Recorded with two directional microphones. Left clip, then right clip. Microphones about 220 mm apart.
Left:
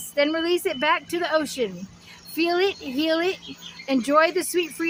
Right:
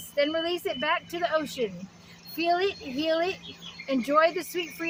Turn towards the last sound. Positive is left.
turn(degrees=35)  # may be behind; listen again after turning